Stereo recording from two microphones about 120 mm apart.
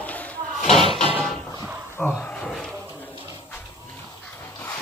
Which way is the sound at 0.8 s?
45° right (ahead or behind).